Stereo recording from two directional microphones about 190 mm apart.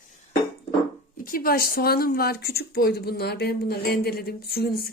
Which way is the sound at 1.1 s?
45° left (ahead or behind).